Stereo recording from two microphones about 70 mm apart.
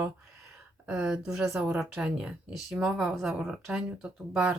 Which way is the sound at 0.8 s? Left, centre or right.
Centre.